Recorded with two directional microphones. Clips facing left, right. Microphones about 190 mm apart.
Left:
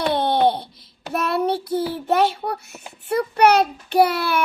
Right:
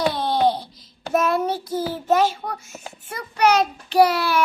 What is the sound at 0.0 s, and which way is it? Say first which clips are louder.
Laughter: left 2 dB; 60° left (ahead or behind).